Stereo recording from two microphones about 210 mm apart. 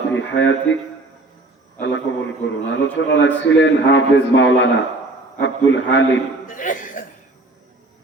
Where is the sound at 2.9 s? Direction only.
60° left (ahead or behind).